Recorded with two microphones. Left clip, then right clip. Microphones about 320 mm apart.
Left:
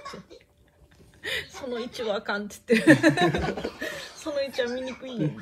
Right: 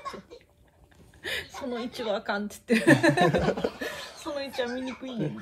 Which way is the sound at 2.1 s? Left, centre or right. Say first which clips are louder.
Left 1 dB; left.